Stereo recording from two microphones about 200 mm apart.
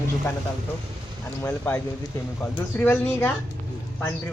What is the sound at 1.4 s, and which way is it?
A man's voice, 10° left (ahead or behind).